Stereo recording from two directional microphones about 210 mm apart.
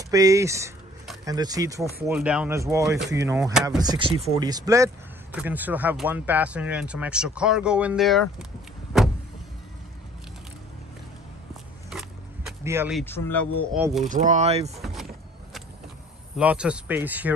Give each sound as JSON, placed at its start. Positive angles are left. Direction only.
{"t": 0.1, "sound": "speech", "side_deg": -15}
{"t": 2.0, "sound": "speech", "side_deg": -5}
{"t": 11.9, "sound": "a sound", "side_deg": 0}
{"t": 12.6, "sound": "speech", "side_deg": -10}
{"t": 13.0, "sound": "speech", "side_deg": 10}
{"t": 14.0, "sound": "speech", "side_deg": -35}
{"t": 14.8, "sound": "vehicle", "side_deg": 0}
{"t": 16.3, "sound": "speech", "side_deg": -5}